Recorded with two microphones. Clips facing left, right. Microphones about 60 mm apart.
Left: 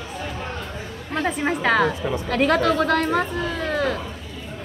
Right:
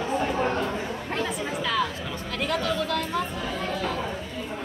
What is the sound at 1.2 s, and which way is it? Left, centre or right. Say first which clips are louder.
Speech: left 8 dB; left.